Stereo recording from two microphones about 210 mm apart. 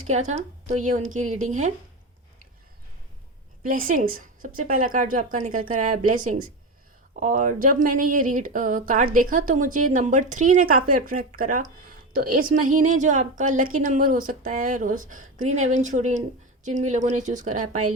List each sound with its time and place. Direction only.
0.0 s speech: 35° right (ahead or behind)
3.6 s speech: 40° right (ahead or behind)